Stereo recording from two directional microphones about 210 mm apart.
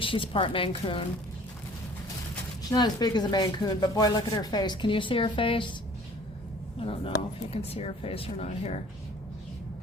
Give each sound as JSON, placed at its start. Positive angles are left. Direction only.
{"t": 0.0, "sound": "speech", "side_deg": 25}
{"t": 2.6, "sound": "speech", "side_deg": 20}
{"t": 6.7, "sound": "speech", "side_deg": 25}